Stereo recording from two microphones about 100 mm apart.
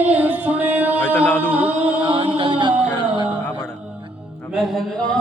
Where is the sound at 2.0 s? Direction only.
65° right (ahead or behind).